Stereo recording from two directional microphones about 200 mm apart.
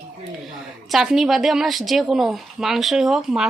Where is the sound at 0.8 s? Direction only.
Centre (ahead or behind).